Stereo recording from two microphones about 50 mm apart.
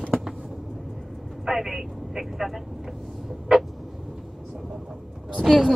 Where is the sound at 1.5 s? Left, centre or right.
Centre.